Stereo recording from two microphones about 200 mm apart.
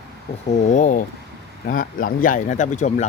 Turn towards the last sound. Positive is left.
turn(degrees=35)  # may be behind; listen again after turning